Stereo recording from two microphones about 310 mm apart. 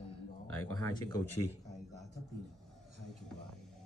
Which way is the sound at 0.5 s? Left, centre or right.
Centre.